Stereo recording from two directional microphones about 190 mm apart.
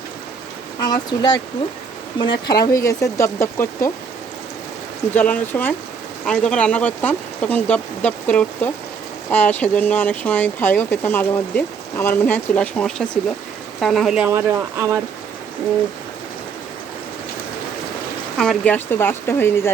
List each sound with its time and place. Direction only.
0.8 s speech: 20° left (ahead or behind)
5.1 s speech: 10° left (ahead or behind)
14.3 s speech: 15° right (ahead or behind)
18.3 s speech: 5° left (ahead or behind)